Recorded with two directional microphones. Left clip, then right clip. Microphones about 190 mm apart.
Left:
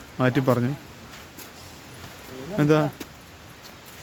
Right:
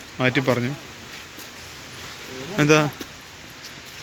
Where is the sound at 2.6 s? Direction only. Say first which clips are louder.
Right 4 dB; 15° left (ahead or behind).